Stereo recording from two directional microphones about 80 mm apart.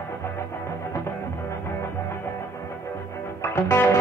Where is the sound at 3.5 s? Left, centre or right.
Left.